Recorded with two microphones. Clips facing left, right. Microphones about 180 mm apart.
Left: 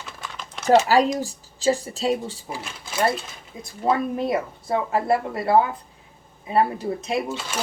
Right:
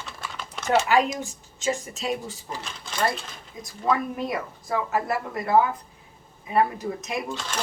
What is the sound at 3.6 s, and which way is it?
Speech, 30° left (ahead or behind).